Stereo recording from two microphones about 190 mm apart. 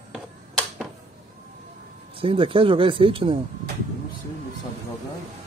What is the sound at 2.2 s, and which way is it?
Speech, 30° right (ahead or behind).